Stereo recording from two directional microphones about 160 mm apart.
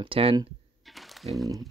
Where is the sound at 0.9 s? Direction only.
Centre (ahead or behind).